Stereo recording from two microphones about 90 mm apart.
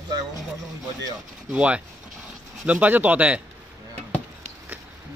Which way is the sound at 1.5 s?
15° right (ahead or behind).